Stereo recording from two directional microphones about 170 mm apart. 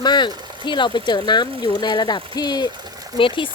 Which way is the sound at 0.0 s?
25° left (ahead or behind).